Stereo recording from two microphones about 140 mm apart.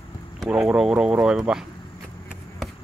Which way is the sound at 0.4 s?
5° right (ahead or behind).